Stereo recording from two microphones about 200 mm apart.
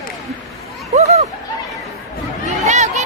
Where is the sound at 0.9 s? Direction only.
35° right (ahead or behind).